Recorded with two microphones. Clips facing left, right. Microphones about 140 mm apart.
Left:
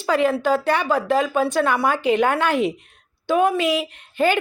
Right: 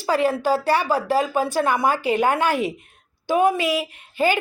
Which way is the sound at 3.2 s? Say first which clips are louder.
Left 1 dB; 10° right (ahead or behind).